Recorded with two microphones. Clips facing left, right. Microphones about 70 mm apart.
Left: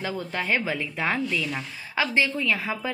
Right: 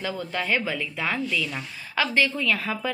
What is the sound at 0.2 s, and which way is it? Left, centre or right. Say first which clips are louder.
A woman's voice: right 1 dB; left.